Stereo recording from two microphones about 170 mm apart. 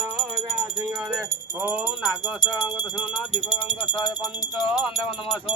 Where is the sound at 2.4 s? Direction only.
25° left (ahead or behind).